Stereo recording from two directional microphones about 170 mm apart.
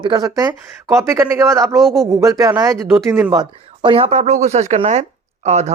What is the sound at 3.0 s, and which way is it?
Speech, 5° right (ahead or behind).